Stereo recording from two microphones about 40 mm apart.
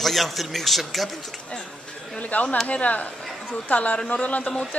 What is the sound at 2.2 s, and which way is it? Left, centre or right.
A woman's voice, left.